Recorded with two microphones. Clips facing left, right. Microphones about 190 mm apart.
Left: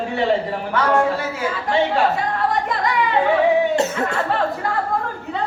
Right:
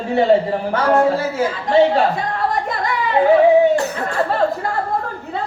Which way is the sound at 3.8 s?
25° left (ahead or behind).